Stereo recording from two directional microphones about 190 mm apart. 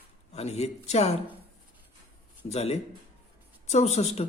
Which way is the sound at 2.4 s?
35° left (ahead or behind).